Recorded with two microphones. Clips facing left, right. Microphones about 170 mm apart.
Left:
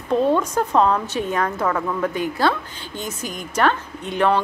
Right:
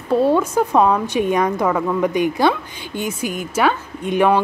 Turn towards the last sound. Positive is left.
turn(degrees=-10)  # may be behind; listen again after turning